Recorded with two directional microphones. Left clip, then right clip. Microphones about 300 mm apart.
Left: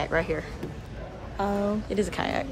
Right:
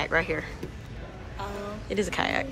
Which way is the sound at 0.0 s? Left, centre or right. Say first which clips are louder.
Right 1 dB; centre.